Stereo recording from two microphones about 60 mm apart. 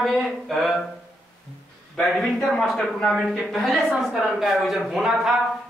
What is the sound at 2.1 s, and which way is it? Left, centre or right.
Speech, centre.